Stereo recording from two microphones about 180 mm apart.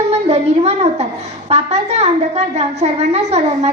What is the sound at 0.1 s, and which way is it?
A woman's voice, 35° right (ahead or behind).